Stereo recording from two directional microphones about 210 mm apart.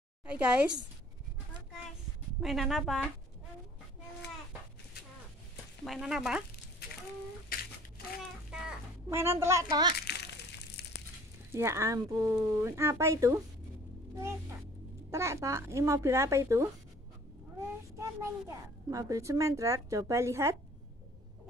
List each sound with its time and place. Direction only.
2.4 s a woman's voice: centre (ahead or behind)
5.9 s a woman's voice: centre (ahead or behind)
7.5 s a sound: 45° left (ahead or behind)
8.5 s a sound: 10° right (ahead or behind)
9.9 s crumpling: 50° left (ahead or behind)
11.5 s a child's voice: 15° right (ahead or behind)
17.9 s a child's voice: 15° right (ahead or behind)